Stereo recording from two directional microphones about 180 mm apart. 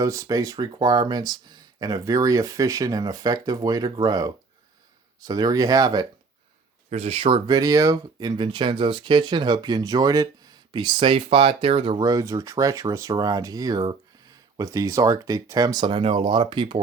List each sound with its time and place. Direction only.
0.0 s speech: 20° right (ahead or behind)
6.9 s speech: 35° right (ahead or behind)